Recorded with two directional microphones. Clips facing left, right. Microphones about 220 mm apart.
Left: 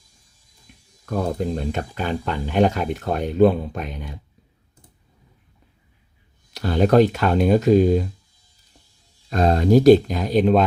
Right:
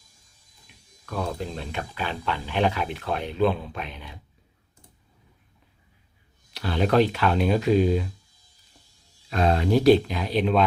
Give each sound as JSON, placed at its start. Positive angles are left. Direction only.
{"t": 1.0, "sound": "speech", "side_deg": 40}
{"t": 6.5, "sound": "speech", "side_deg": 45}
{"t": 9.3, "sound": "speech", "side_deg": 40}